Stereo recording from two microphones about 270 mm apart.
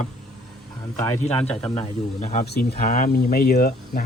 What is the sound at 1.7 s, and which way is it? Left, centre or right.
Speech, left.